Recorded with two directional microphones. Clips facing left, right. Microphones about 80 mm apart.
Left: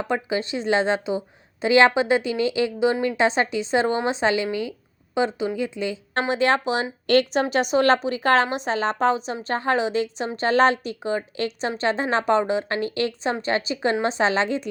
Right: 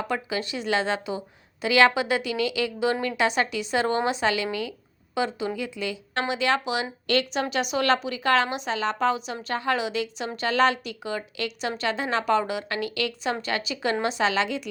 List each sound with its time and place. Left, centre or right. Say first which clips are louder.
0.1 s speech: left 4 dB; left
6.2 s a woman's voice: left 4 dB; left